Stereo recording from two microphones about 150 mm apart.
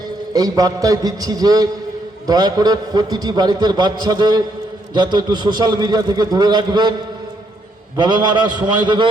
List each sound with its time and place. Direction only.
0.3 s a man's voice: 25° right (ahead or behind)
7.9 s a man's voice: 30° right (ahead or behind)